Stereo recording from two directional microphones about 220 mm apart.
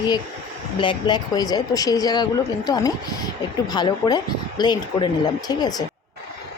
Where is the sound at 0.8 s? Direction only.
20° left (ahead or behind).